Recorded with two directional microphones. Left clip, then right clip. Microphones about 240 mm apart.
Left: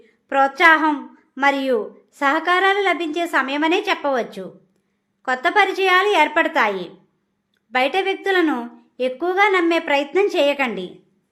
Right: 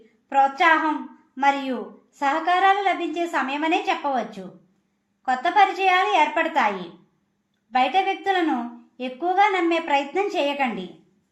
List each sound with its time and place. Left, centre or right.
0.3 s a woman's voice: left